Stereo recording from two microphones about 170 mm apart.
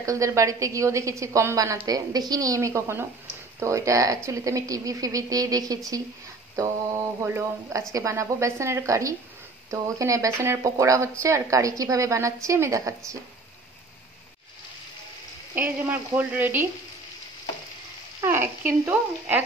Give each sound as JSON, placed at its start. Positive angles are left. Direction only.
{"t": 0.0, "sound": "a woman's voice", "side_deg": -20}
{"t": 15.5, "sound": "a woman's voice", "side_deg": -10}
{"t": 18.2, "sound": "a woman's voice", "side_deg": -15}